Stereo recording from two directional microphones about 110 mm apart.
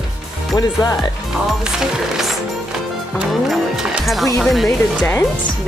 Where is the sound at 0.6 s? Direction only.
35° left (ahead or behind).